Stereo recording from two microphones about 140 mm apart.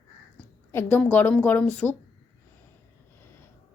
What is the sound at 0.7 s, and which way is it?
Speech, 10° left (ahead or behind).